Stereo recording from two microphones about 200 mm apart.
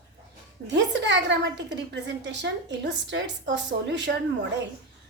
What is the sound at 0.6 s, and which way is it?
A woman's voice, 60° right (ahead or behind).